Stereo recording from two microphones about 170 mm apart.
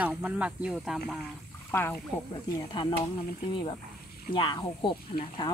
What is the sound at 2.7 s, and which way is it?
Speech, 25° left (ahead or behind).